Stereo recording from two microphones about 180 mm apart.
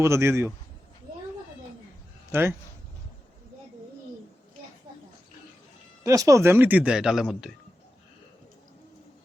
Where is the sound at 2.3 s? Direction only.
15° right (ahead or behind).